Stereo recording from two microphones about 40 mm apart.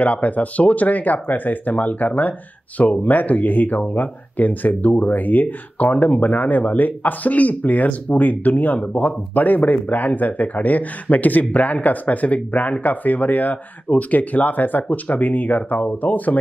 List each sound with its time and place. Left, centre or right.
0.0 s speech: left